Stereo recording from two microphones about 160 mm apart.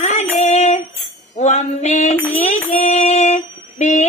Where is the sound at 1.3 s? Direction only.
45° left (ahead or behind).